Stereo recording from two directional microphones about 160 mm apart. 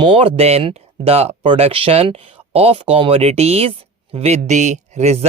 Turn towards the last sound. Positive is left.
turn(degrees=-45)  # may be behind; listen again after turning